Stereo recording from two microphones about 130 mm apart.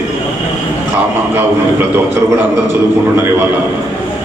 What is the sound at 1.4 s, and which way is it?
A man's voice, 15° right (ahead or behind).